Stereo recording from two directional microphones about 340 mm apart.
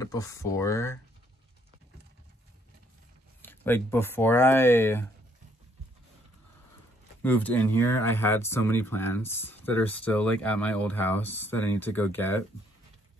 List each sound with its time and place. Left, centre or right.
0.0 s speech: centre
3.4 s speech: centre
7.2 s speech: centre